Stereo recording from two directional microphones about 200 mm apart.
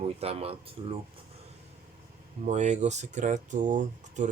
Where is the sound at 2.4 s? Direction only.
35° right (ahead or behind).